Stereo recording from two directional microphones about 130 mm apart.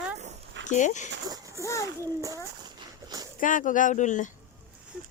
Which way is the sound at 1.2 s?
25° right (ahead or behind).